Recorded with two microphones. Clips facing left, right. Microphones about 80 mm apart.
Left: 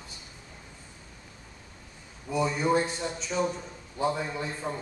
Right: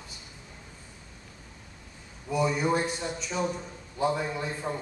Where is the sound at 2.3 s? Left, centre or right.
Centre.